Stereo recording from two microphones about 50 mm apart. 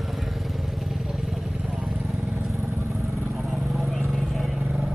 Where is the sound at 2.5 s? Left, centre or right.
Right.